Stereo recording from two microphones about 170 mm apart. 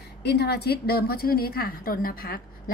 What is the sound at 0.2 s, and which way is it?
A woman's voice, 75° left (ahead or behind).